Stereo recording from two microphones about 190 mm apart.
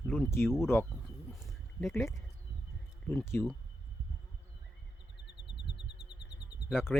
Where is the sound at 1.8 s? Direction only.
10° left (ahead or behind).